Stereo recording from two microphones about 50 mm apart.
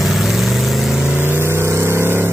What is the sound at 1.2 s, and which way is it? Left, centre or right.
Vehicle, right.